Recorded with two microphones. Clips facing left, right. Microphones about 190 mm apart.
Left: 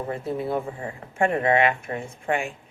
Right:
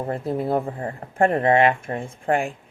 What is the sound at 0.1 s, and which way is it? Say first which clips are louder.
Speech: right 4 dB; 45° right (ahead or behind).